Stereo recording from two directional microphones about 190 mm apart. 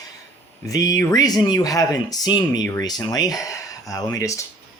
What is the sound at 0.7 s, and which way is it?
Speech, 20° left (ahead or behind).